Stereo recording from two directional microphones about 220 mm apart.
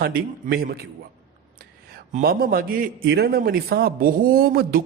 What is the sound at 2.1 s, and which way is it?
A man's voice, 40° right (ahead or behind).